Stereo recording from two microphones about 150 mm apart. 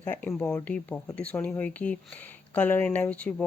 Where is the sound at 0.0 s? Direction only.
10° left (ahead or behind).